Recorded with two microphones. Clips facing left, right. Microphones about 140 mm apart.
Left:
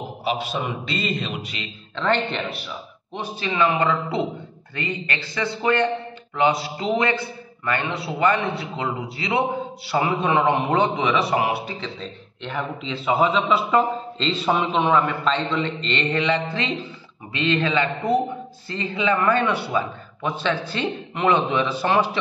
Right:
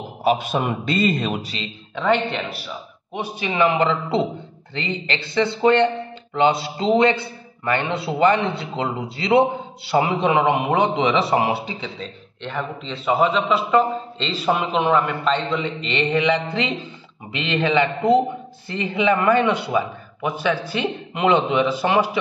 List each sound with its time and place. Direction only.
0.2 s a man's voice: 50° right (ahead or behind)
2.0 s a man's voice: 5° right (ahead or behind)
4.7 s a man's voice: 25° right (ahead or behind)
11.0 s a man's voice: 25° right (ahead or behind)
12.0 s a man's voice: 5° left (ahead or behind); by 22.1 s 15° right (ahead or behind)